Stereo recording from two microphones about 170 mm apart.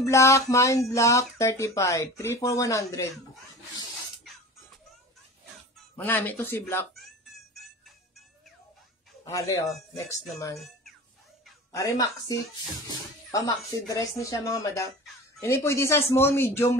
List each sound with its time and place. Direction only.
0.0 s speech: 15° left (ahead or behind)
6.0 s speech: 10° left (ahead or behind)
9.2 s speech: 20° left (ahead or behind)
11.7 s speech: 20° left (ahead or behind)